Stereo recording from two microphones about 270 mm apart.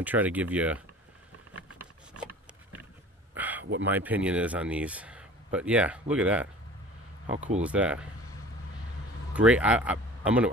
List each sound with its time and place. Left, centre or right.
0.0 s speech: centre
3.3 s a sound: centre
3.8 s speech: centre
7.3 s speech: right
7.6 s speech: centre
9.3 s speech: centre